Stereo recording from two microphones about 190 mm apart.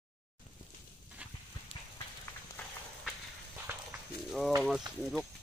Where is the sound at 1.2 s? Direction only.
5° right (ahead or behind).